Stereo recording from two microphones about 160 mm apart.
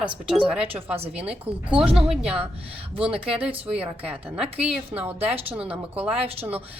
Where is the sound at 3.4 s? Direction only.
10° right (ahead or behind).